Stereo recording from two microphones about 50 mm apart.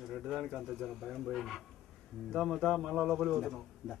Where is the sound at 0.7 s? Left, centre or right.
Centre.